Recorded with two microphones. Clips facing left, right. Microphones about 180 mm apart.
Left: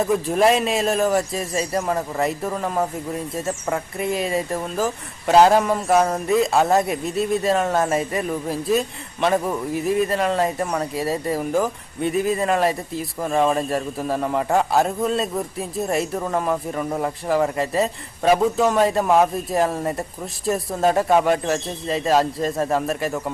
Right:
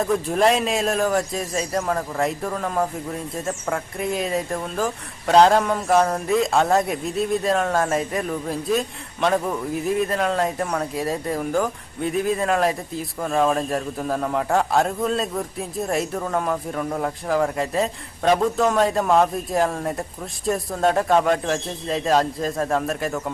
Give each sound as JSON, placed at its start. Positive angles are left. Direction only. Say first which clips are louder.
{"t": 0.0, "sound": "speech", "louder": "left 1 dB", "side_deg": 0}